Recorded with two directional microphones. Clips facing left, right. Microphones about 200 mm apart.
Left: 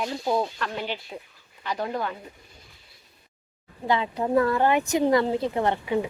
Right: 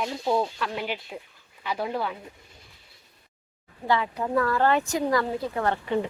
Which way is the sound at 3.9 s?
20° left (ahead or behind).